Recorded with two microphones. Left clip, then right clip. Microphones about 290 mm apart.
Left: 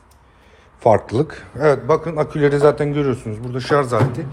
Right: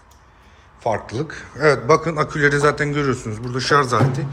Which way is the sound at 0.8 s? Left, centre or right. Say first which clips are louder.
Left 8 dB; centre.